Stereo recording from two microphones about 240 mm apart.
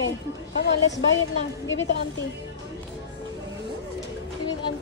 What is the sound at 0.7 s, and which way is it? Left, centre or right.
A woman's voice, left.